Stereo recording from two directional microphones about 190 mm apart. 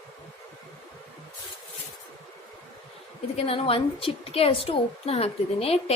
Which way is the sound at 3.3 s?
30° left (ahead or behind).